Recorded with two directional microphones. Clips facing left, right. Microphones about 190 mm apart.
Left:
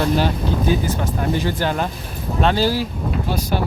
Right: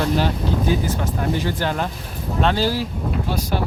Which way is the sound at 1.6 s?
15° left (ahead or behind).